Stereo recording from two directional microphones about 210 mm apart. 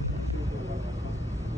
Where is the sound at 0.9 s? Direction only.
15° right (ahead or behind).